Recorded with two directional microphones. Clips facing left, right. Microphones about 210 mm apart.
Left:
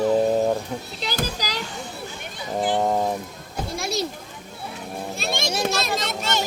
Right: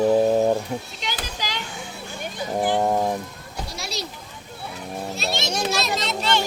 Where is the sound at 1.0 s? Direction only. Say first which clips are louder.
Left 4 dB; 40° left (ahead or behind).